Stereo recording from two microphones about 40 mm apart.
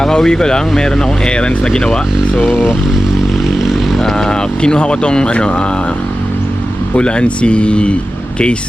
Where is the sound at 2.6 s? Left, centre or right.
Centre.